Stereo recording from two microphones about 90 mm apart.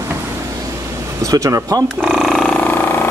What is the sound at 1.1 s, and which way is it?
Speech, 40° right (ahead or behind).